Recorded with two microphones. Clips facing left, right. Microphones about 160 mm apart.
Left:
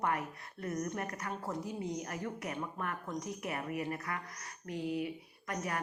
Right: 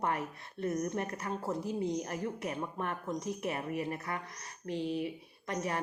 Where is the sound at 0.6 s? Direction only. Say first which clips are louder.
Right 4 dB; 25° right (ahead or behind).